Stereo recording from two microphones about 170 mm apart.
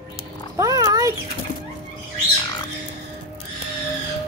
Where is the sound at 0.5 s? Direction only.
20° right (ahead or behind).